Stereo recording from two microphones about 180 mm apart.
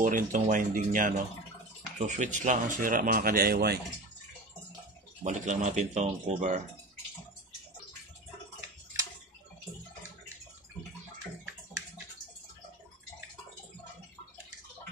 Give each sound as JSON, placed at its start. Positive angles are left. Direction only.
{"t": 0.0, "sound": "speech", "side_deg": -45}
{"t": 5.2, "sound": "speech", "side_deg": -40}